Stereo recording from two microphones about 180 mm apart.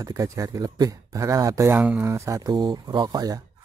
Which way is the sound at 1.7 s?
5° right (ahead or behind).